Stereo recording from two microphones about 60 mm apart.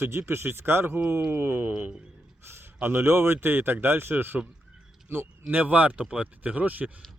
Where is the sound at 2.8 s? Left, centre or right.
Right.